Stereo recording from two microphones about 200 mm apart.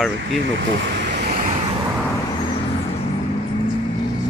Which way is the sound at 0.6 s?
55° right (ahead or behind).